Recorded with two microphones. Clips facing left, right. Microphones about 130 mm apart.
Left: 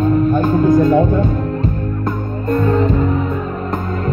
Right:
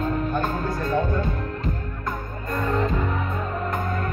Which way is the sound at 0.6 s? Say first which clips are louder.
Left 13 dB; 20° left (ahead or behind).